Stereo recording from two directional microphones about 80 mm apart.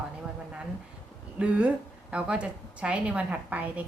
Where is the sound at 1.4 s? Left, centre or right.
Centre.